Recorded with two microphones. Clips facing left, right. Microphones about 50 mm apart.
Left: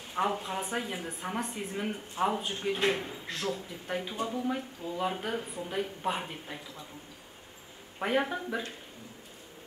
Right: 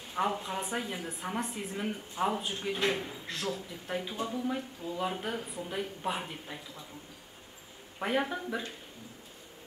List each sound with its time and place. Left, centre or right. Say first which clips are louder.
0.1 s a woman's voice: left 1 dB; centre
8.0 s speech: left 2 dB; centre